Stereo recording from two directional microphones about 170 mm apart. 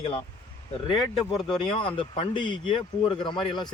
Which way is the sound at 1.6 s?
30° left (ahead or behind).